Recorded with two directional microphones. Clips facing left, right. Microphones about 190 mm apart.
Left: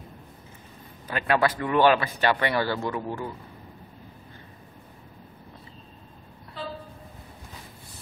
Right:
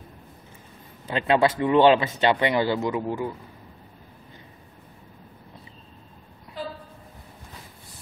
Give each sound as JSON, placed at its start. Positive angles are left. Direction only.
{"t": 1.0, "sound": "a man's voice", "side_deg": -25}